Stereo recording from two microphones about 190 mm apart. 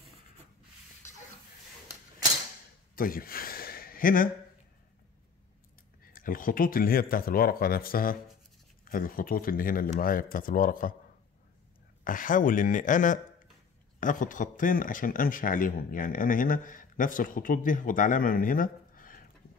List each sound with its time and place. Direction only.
3.0 s a sound: 50° left (ahead or behind)
6.1 s a man's voice: 45° left (ahead or behind)
12.0 s a man's voice: 45° left (ahead or behind)